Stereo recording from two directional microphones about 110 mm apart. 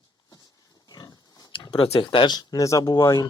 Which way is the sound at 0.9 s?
35° left (ahead or behind).